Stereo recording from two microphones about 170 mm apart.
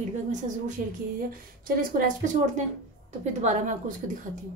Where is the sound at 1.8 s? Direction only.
50° right (ahead or behind).